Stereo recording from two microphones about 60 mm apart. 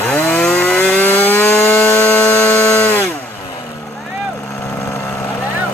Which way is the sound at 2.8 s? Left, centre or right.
Left.